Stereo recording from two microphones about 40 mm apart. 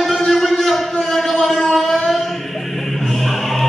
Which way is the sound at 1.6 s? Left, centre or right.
Centre.